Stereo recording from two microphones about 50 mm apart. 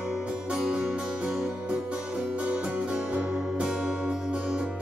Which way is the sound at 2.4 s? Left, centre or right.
Right.